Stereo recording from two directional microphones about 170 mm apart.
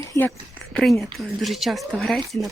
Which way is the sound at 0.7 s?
Centre (ahead or behind).